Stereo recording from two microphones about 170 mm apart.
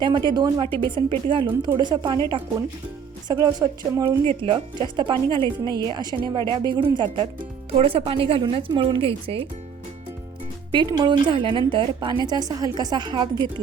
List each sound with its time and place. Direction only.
0.0 s a woman's voice: 25° right (ahead or behind)
3.2 s a woman's voice: 20° right (ahead or behind)
4.3 s a woman's voice: 30° right (ahead or behind)
10.7 s a woman's voice: 25° right (ahead or behind)